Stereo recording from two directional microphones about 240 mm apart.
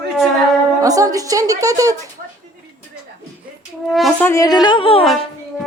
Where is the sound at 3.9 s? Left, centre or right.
Centre; by 5.0 s left.